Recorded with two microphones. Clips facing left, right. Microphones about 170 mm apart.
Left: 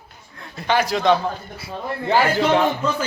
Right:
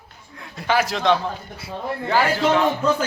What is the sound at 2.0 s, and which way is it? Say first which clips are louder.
Speech: left 2 dB; 25° left (ahead or behind).